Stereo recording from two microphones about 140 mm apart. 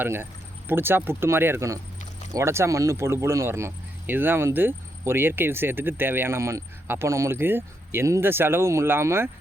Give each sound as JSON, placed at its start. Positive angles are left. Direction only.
{"t": 0.0, "sound": "speech", "side_deg": -15}